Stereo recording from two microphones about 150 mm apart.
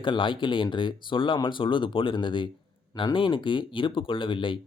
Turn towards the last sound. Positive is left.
turn(degrees=35)  # may be behind; listen again after turning